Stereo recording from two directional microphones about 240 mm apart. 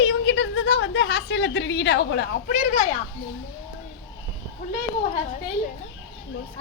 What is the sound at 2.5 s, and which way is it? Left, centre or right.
Speech, left.